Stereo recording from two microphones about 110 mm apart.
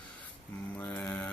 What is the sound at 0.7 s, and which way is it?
Speech, 15° left (ahead or behind).